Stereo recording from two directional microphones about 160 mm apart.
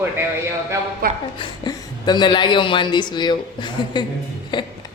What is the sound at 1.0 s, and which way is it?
Speech, 70° right (ahead or behind).